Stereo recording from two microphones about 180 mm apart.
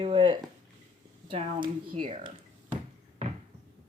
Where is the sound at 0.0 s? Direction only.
25° right (ahead or behind).